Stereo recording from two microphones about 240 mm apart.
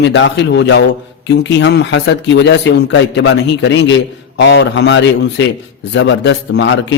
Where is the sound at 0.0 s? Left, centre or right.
Left.